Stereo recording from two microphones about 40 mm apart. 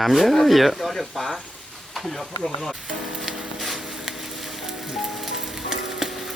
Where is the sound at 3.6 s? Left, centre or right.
Centre.